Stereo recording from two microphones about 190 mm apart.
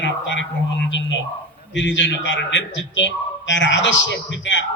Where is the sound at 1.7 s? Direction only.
70° left (ahead or behind).